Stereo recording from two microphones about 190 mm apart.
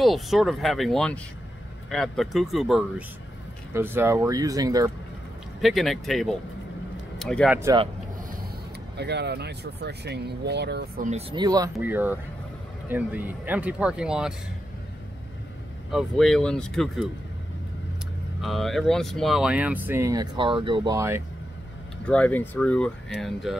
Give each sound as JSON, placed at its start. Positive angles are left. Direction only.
{"t": 0.0, "sound": "speech", "side_deg": 0}
{"t": 3.7, "sound": "speech", "side_deg": -10}
{"t": 5.6, "sound": "speech", "side_deg": 0}
{"t": 8.9, "sound": "speech", "side_deg": -60}
{"t": 11.1, "sound": "speech", "side_deg": -30}
{"t": 15.9, "sound": "speech", "side_deg": 0}
{"t": 18.4, "sound": "speech", "side_deg": 0}
{"t": 22.0, "sound": "speech", "side_deg": 5}